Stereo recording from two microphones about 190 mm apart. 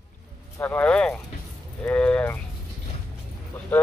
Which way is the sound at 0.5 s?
10° left (ahead or behind).